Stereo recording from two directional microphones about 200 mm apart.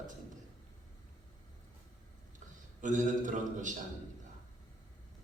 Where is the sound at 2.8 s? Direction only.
40° right (ahead or behind).